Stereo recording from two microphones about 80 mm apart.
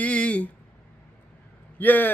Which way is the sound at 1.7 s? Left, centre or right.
Left.